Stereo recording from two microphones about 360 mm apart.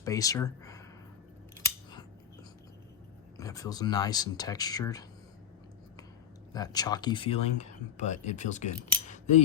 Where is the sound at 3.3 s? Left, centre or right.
Centre.